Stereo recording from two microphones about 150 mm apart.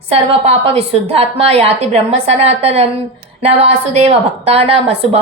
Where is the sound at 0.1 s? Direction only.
45° right (ahead or behind).